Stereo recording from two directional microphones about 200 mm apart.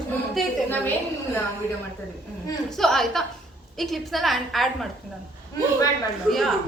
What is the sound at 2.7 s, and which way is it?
Speech, centre (ahead or behind).